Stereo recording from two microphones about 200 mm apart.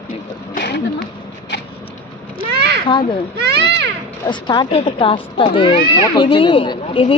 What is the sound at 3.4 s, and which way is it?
Speech, 55° right (ahead or behind).